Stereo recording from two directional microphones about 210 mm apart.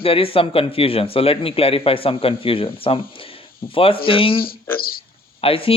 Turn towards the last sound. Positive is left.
turn(degrees=25)  # may be behind; listen again after turning